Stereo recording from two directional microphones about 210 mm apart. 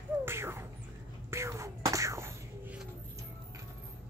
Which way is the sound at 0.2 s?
10° right (ahead or behind).